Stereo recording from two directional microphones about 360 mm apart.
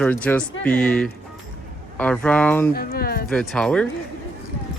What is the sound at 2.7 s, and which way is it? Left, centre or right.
Speech, left.